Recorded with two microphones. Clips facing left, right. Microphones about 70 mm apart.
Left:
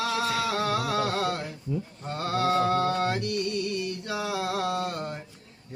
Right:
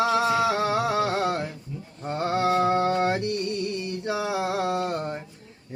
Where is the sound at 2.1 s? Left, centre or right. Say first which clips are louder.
Right 3 dB; right.